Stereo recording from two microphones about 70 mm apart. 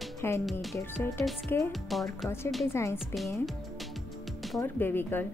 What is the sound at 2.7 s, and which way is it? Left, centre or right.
Speech, left.